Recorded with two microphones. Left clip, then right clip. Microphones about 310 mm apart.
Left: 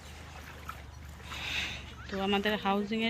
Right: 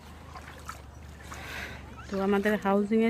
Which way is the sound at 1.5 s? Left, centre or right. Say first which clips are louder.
Left 5 dB; centre.